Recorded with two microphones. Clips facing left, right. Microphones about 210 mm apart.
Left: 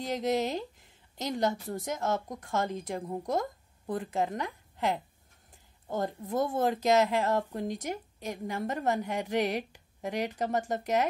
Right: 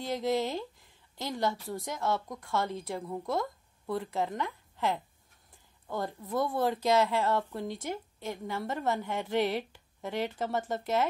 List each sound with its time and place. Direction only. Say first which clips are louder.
0.0 s a woman's voice: left 1 dB; 20° left (ahead or behind)
2.0 s speech: even; 45° left (ahead or behind)
2.2 s speech: left 1 dB; 20° left (ahead or behind)
3.3 s a sound: left 1 dB; 45° left (ahead or behind)
3.9 s a woman's voice: left 1 dB; 15° left (ahead or behind)
6.0 s a woman's voice: left 1 dB; 20° left (ahead or behind)